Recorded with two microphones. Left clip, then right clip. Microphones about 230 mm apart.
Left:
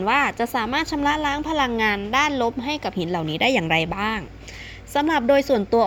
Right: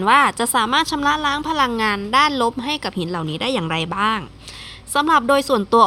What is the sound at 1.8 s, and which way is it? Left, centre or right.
Speech, right.